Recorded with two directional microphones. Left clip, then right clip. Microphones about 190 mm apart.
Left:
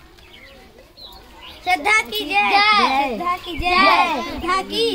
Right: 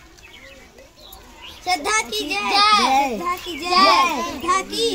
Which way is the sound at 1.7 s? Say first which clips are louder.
Left 4 dB; centre (ahead or behind).